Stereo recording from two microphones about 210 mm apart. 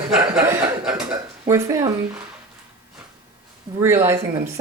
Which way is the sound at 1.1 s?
15° right (ahead or behind).